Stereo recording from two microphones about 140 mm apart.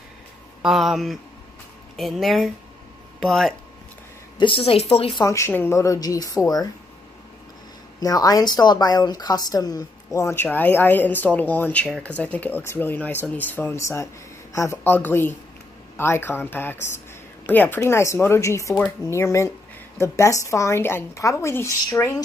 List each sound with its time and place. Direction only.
0.6 s speech: centre (ahead or behind)
4.4 s a woman's voice: 40° left (ahead or behind)
5.2 s speech: 20° left (ahead or behind)
8.0 s speech: 25° left (ahead or behind)